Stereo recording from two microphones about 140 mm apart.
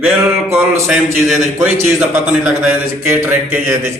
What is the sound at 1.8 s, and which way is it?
A man's voice, 10° right (ahead or behind).